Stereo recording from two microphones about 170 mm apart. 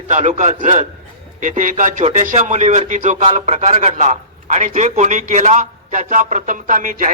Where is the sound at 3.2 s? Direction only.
35° right (ahead or behind).